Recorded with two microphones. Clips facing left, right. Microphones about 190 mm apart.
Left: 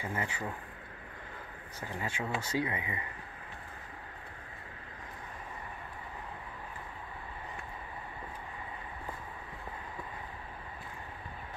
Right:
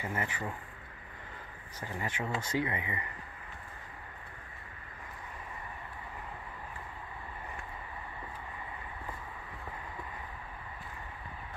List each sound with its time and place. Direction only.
0.0 s speech: 15° left (ahead or behind)
1.8 s speech: 10° left (ahead or behind)